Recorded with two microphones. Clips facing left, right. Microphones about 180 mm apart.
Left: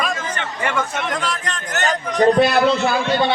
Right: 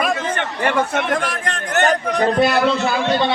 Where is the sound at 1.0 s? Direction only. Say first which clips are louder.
Right 3 dB; 60° right (ahead or behind).